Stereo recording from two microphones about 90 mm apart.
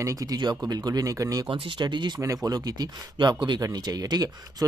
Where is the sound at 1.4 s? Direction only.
70° right (ahead or behind).